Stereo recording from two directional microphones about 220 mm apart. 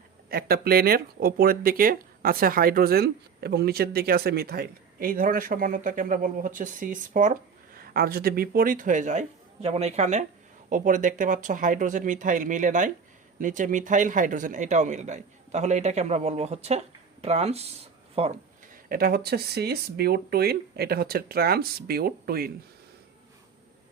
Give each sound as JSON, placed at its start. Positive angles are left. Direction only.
{"t": 0.3, "sound": "speech", "side_deg": -45}
{"t": 18.9, "sound": "speech", "side_deg": -40}